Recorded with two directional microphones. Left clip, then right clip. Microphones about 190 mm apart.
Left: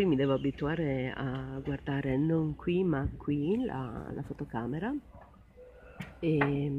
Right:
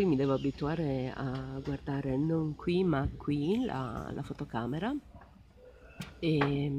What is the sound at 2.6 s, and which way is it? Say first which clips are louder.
Speech: even; 15° right (ahead or behind).